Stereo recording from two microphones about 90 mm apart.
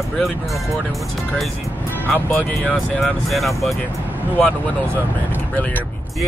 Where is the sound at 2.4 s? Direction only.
15° left (ahead or behind).